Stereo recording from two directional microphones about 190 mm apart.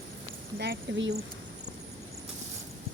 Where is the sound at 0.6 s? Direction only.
60° right (ahead or behind).